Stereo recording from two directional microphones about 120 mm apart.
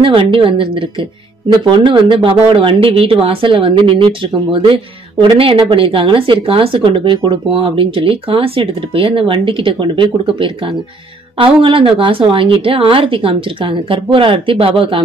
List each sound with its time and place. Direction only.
0.0 s speech: 45° right (ahead or behind)
1.9 s speech: 45° right (ahead or behind)